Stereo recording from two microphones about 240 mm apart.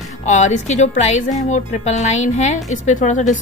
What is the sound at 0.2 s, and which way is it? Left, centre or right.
A woman's voice, left.